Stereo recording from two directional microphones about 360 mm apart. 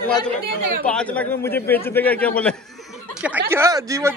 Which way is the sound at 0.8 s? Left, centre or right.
Centre.